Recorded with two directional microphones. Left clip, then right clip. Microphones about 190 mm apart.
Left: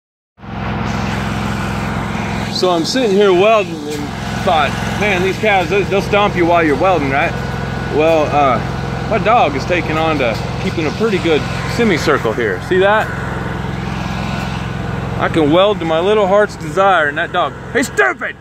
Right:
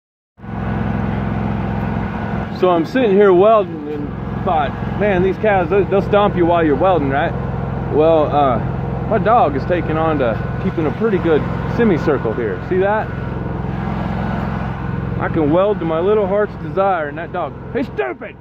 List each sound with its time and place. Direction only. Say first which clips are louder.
2.6 s speech: even; 25° right (ahead or behind)
5.0 s speech: even; 10° right (ahead or behind)
6.3 s speech: left 2 dB; 5° left (ahead or behind)
11.8 s speech: left 2 dB; 10° right (ahead or behind); by 13.0 s 5° left (ahead or behind)
15.2 s speech: left 4 dB; 5° left (ahead or behind)